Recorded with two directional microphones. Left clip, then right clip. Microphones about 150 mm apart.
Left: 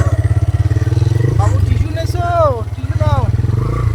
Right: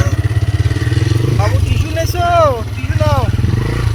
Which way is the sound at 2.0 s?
15° right (ahead or behind).